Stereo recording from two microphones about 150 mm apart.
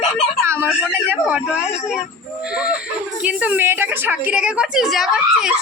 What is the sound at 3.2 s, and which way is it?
A woman's voice, 10° right (ahead or behind).